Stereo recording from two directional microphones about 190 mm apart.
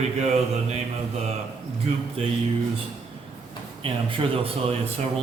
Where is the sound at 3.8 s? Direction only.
30° right (ahead or behind).